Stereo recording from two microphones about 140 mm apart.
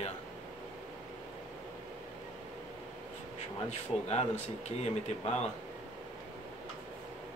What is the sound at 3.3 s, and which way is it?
Speech, 50° left (ahead or behind).